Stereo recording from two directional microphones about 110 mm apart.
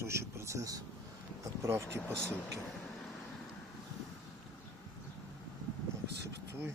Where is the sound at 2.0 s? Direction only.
10° left (ahead or behind).